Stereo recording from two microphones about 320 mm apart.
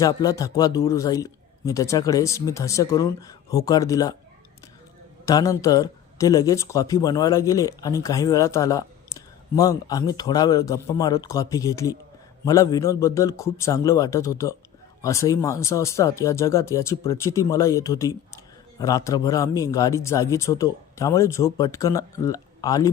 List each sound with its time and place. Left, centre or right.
0.0 s speech: centre
5.2 s speech: centre